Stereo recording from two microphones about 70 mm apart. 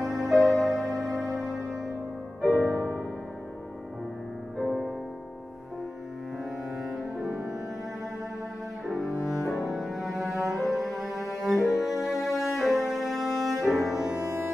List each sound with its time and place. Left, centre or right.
0.0 s music: centre
2.4 s music: left
4.6 s music: centre
8.8 s cello: centre
10.5 s music: centre